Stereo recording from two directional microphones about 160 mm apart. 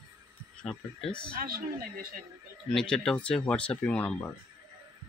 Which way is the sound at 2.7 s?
5° left (ahead or behind).